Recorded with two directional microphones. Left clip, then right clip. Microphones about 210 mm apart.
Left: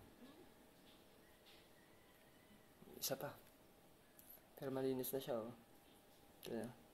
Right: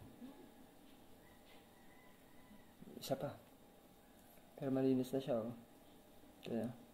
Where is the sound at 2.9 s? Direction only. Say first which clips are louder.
Right 4 dB; 5° left (ahead or behind).